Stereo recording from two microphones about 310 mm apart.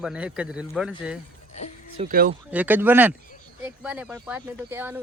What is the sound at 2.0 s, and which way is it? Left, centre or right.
Speech, right.